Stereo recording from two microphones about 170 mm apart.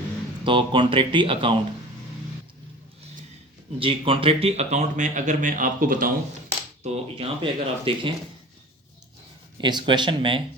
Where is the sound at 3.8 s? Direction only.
30° right (ahead or behind); by 6.1 s 55° right (ahead or behind).